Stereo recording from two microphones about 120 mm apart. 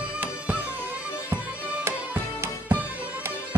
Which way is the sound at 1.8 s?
20° right (ahead or behind).